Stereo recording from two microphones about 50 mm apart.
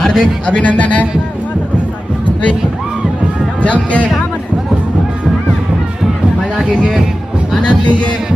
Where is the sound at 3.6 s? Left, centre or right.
Left.